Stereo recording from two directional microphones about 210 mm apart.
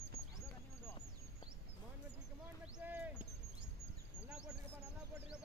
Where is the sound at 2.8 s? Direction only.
10° right (ahead or behind).